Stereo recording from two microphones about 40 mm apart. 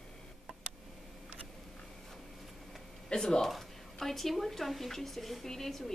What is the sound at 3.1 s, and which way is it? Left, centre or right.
Speech, centre.